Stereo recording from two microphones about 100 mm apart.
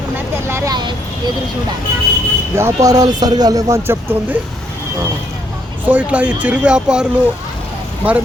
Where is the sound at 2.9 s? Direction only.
40° right (ahead or behind).